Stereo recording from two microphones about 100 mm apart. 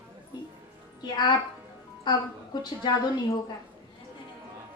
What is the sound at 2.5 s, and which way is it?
Speech, 45° left (ahead or behind).